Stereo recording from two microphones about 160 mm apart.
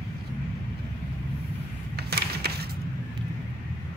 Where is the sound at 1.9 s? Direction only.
85° right.